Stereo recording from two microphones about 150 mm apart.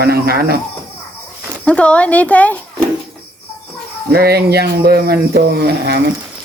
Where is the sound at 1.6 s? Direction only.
10° left (ahead or behind).